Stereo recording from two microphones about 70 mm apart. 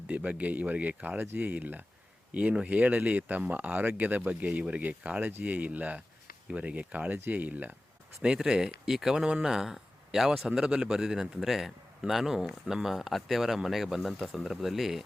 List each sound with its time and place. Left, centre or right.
0.1 s speech: centre
8.2 s speech: centre